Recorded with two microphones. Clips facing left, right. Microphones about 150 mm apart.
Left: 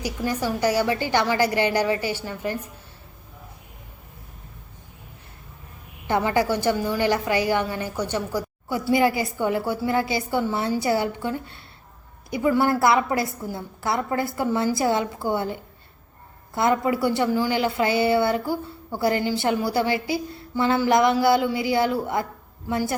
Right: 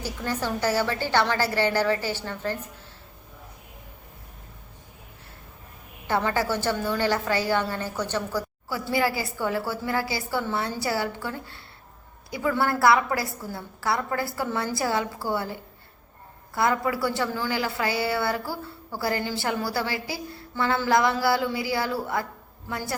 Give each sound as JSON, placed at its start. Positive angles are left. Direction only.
{"t": 0.0, "sound": "a woman's voice", "side_deg": 10}
{"t": 6.1, "sound": "a woman's voice", "side_deg": 15}
{"t": 16.6, "sound": "a woman's voice", "side_deg": 20}